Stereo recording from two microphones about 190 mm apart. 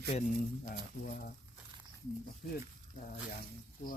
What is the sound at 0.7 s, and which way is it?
Speech, 55° left (ahead or behind).